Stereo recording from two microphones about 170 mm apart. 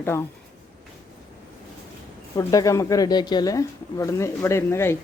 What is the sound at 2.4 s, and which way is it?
Speech, 20° left (ahead or behind).